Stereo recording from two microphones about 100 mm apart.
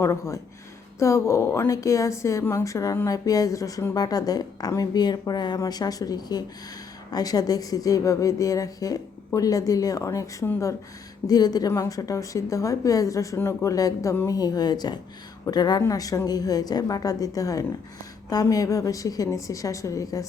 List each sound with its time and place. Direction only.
0.0 s a woman's voice: 30° left (ahead or behind)
11.3 s a woman's voice: 40° left (ahead or behind)
14.3 s a woman's voice: 40° left (ahead or behind)